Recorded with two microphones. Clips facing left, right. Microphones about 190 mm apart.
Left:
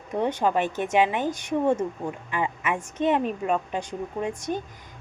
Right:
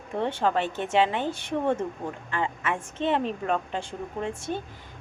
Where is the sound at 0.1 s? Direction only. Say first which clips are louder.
Left 2 dB; 15° left (ahead or behind).